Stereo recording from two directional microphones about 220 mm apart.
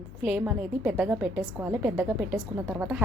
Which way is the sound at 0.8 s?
5° right (ahead or behind).